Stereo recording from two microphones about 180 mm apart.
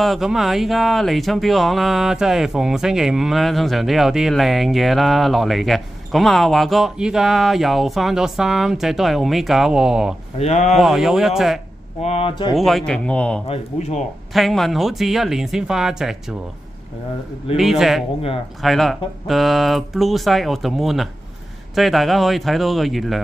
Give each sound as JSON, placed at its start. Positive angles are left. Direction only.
{"t": 0.0, "sound": "speech", "side_deg": 0}
{"t": 10.4, "sound": "speech", "side_deg": 35}
{"t": 10.8, "sound": "speech", "side_deg": 0}
{"t": 12.0, "sound": "speech", "side_deg": 35}
{"t": 12.5, "sound": "speech", "side_deg": 0}
{"t": 13.5, "sound": "speech", "side_deg": 35}
{"t": 14.3, "sound": "speech", "side_deg": 0}
{"t": 17.6, "sound": "speech", "side_deg": 0}